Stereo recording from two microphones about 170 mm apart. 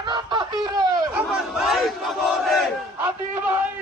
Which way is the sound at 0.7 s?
25° right (ahead or behind).